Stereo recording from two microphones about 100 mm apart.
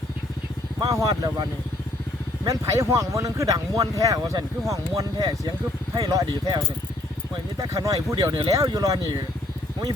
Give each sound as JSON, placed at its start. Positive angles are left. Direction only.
{"t": 0.8, "sound": "speech", "side_deg": -40}
{"t": 7.6, "sound": "speech", "side_deg": -35}